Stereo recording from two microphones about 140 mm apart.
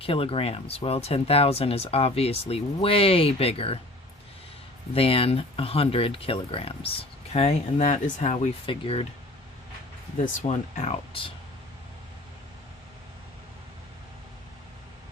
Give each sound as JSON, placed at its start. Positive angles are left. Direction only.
{"t": 0.0, "sound": "speech", "side_deg": 40}
{"t": 4.9, "sound": "speech", "side_deg": 45}
{"t": 8.6, "sound": "speech", "side_deg": 40}
{"t": 10.4, "sound": "speech", "side_deg": 50}